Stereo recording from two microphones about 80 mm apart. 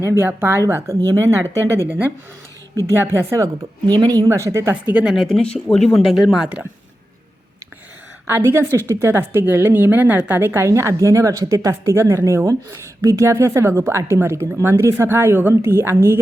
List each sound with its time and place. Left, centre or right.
0.0 s a woman's voice: right
2.9 s a woman's voice: right
3.8 s speech: right
4.3 s a woman's voice: right
4.7 s a woman's voice: right
5.0 s speech: centre
5.4 s speech: centre
8.3 s a woman's voice: right